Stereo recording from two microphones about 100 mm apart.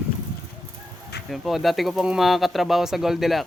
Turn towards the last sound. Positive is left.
turn(degrees=0)  # may be behind; listen again after turning